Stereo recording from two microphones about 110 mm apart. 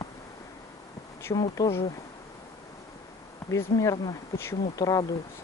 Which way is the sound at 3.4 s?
30° left (ahead or behind).